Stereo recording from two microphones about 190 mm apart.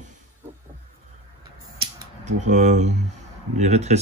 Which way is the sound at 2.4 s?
40° right (ahead or behind).